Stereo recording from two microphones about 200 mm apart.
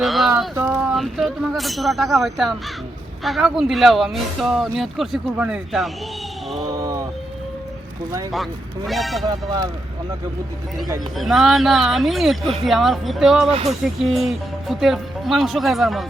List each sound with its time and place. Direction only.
0.0 s a sound: centre (ahead or behind)
0.5 s a sound: 10° right (ahead or behind)
0.9 s speech: centre (ahead or behind)
8.9 s speech: centre (ahead or behind)
9.2 s speech: 20° right (ahead or behind)
11.2 s speech: centre (ahead or behind)